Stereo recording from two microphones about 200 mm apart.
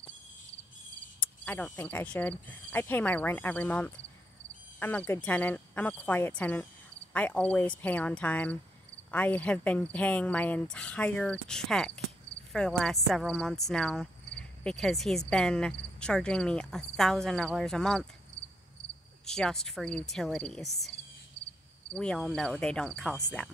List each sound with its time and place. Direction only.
1.2 s speech: 5° left (ahead or behind)
11.4 s cricket: 5° left (ahead or behind)
19.2 s cricket: 5° left (ahead or behind)
21.9 s cricket: 5° left (ahead or behind)